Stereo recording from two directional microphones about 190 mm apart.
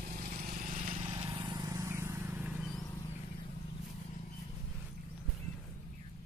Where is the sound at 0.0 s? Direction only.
45° right (ahead or behind).